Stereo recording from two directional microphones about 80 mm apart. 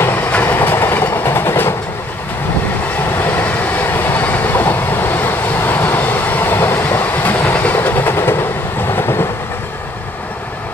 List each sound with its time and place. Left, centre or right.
0.0 s train: left
3.2 s train: left